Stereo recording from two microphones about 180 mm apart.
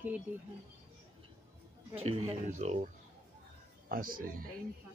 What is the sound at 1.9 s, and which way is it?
Speech, 35° right (ahead or behind).